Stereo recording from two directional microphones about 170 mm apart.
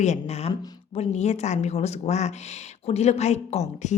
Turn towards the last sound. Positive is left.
turn(degrees=40)  # may be behind; listen again after turning